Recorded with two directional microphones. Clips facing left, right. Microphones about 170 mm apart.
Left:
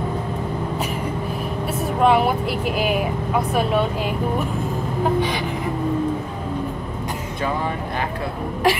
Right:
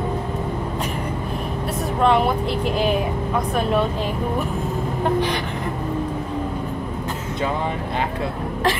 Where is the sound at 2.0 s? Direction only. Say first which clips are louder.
Left 1 dB; 5° left (ahead or behind).